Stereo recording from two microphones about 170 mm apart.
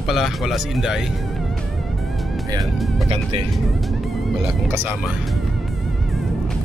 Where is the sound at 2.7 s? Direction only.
Centre (ahead or behind).